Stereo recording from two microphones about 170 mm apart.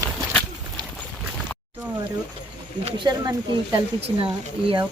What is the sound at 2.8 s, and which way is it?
Speech, 25° right (ahead or behind).